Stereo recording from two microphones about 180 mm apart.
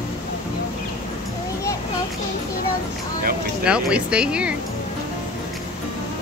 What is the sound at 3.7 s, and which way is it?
Speech, 5° right (ahead or behind).